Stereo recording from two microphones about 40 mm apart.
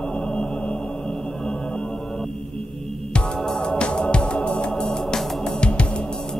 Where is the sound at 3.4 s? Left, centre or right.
Centre.